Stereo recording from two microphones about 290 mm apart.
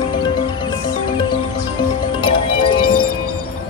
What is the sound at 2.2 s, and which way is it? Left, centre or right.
Music, centre.